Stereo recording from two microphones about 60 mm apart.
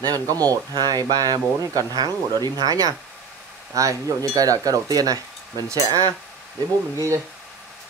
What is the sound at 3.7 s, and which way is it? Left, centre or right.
Speech, right.